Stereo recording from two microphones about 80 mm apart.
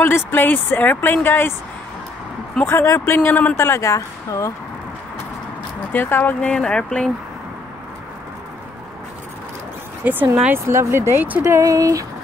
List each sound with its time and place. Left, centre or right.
0.0 s speech: left
2.6 s speech: left
3.5 s speech: left
5.9 s speech: left
6.4 s speech: centre
10.0 s speech: right
11.5 s speech: right